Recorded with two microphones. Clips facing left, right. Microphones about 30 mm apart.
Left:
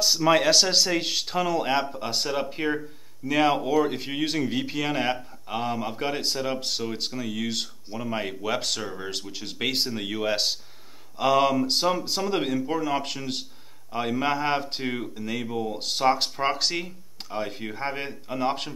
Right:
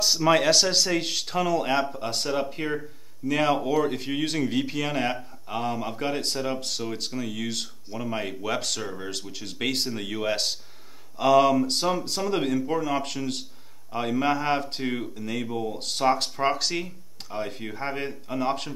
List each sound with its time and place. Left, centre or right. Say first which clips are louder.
0.0 s speech: even; centre
7.2 s a man's voice: left 1 dB; centre
15.4 s speech: left 1 dB; centre
15.7 s a man's voice: left 1 dB; centre